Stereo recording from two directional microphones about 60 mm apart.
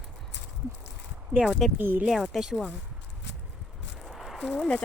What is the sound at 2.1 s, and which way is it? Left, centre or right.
Speech, centre.